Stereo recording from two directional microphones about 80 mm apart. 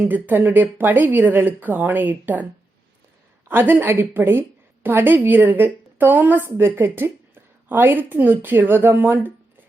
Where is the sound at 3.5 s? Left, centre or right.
Right.